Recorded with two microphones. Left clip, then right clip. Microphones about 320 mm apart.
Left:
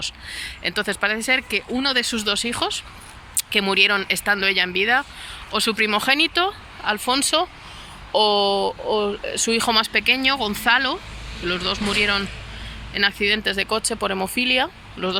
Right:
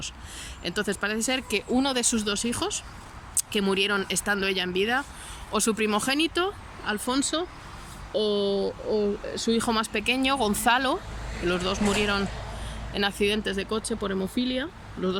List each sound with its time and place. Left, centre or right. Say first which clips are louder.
0.0 s speech: left 9 dB; centre
8.4 s speech: left 6 dB; left
8.9 s speech: left 2 dB; left
9.6 s speech: left 7 dB; centre
14.1 s speech: left 11 dB; left
14.6 s speech: left 7 dB; centre